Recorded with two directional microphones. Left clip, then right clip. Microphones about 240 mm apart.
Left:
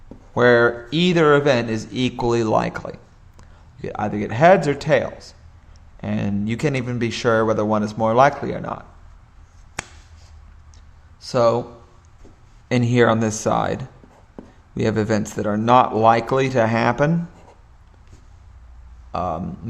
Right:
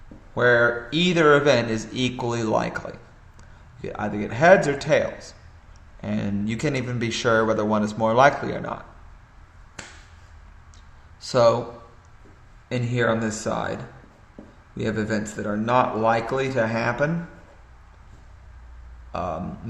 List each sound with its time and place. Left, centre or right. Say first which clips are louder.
0.3 s speech: left 3 dB; left
11.3 s a man's voice: left 1 dB; left
12.6 s speech: left 6 dB; left
14.8 s speech: left 6 dB; left
19.1 s speech: left 4 dB; left